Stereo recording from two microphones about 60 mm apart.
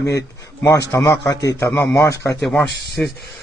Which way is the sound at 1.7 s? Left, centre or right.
Left.